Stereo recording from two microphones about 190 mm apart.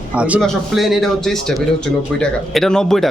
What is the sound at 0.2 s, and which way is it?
Speech, 5° right (ahead or behind).